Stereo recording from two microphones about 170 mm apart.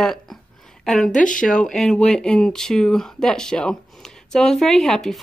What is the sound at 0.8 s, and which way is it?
Speech, 5° left (ahead or behind).